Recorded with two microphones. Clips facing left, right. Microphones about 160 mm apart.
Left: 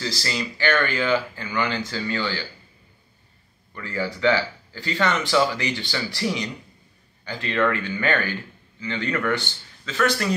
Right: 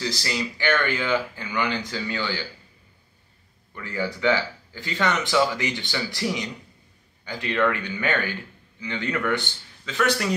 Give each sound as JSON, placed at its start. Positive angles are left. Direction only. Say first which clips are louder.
{"t": 0.0, "sound": "speech", "louder": "even", "side_deg": -15}
{"t": 3.8, "sound": "a man's voice", "louder": "left 2 dB", "side_deg": -15}